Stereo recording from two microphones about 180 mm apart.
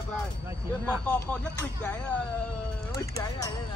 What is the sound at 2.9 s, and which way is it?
Speech, 20° left (ahead or behind).